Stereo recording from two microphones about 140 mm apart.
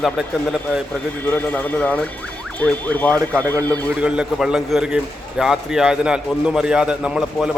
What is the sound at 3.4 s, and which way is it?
Speech, 25° right (ahead or behind).